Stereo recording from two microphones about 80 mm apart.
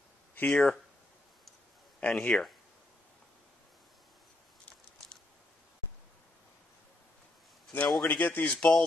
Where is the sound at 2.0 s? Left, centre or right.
Centre.